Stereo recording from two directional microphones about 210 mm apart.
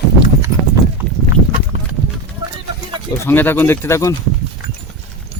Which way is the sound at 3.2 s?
10° left (ahead or behind).